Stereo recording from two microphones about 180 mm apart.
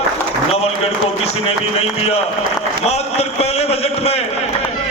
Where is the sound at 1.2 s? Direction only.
35° left (ahead or behind).